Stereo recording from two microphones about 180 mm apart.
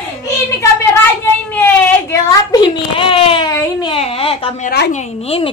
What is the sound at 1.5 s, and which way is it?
Baby cry, 10° left (ahead or behind).